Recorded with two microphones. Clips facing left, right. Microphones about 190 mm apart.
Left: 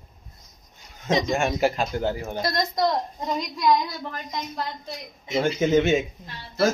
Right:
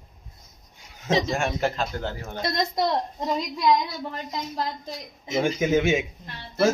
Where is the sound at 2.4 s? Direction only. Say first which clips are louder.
Even; 25° right (ahead or behind).